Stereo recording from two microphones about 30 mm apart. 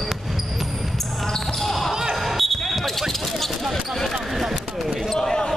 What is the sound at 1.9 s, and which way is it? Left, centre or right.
Basketball bounce, centre.